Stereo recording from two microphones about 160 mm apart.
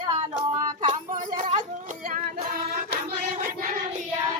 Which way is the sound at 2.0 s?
60° right (ahead or behind).